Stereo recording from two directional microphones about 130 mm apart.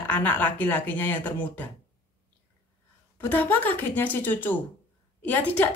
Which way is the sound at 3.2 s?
15° left (ahead or behind).